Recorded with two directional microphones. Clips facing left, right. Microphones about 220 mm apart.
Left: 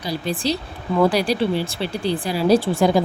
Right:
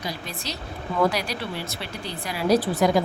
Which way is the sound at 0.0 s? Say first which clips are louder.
Left 9 dB; 30° left (ahead or behind).